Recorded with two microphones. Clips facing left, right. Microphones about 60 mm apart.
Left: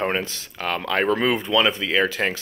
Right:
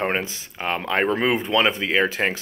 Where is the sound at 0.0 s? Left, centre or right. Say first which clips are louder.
Even; right.